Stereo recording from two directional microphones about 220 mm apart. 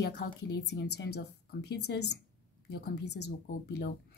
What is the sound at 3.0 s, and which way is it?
Speech, 90° left.